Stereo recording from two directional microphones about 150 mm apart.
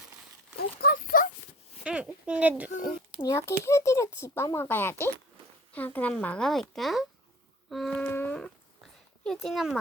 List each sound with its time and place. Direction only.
0.5 s a sound: 90° left
1.8 s speech: 5° right (ahead or behind)
3.2 s speech: 20° left (ahead or behind); by 9.7 s centre (ahead or behind)